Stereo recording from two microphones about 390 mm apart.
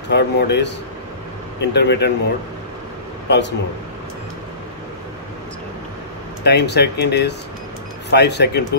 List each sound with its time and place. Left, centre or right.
0.1 s speech: left
3.3 s speech: left
6.4 s speech: left